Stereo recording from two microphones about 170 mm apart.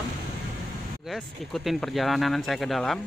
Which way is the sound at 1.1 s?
Centre (ahead or behind).